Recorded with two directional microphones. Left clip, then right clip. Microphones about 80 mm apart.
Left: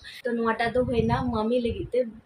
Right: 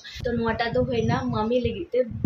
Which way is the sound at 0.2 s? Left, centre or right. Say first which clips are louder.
Even; right.